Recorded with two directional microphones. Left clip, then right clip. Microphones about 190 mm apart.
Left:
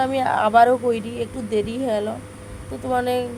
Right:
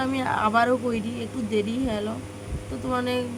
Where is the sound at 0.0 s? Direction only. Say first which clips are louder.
Left 5 dB; 10° left (ahead or behind).